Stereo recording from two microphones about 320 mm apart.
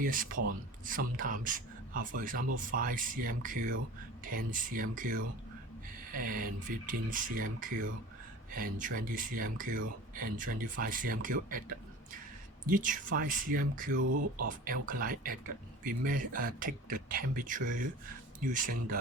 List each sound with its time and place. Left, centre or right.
0.0 s speech: right
12.6 s speech: right
14.0 s speech: right
14.4 s speech: right